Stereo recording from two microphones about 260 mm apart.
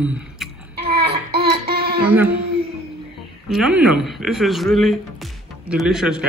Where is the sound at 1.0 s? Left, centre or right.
Right.